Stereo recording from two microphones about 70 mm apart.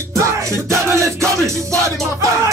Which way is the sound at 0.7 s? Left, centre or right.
Right.